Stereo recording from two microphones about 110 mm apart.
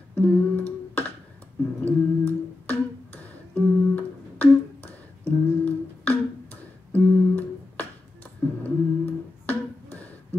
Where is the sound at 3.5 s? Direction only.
15° left (ahead or behind).